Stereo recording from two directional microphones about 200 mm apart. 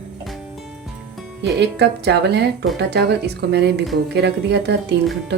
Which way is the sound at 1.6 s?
60° right (ahead or behind).